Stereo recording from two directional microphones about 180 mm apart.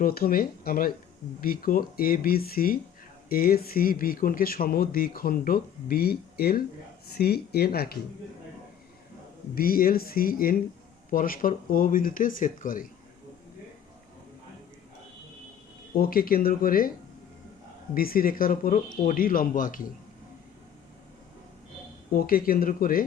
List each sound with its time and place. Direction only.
0.0 s speech: 55° left (ahead or behind)
9.6 s speech: 55° left (ahead or behind)
16.0 s speech: 55° left (ahead or behind)
17.9 s speech: 55° left (ahead or behind)
22.1 s speech: 55° left (ahead or behind)